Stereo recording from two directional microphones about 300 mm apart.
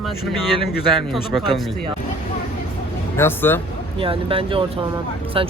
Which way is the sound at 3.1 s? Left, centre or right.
Centre.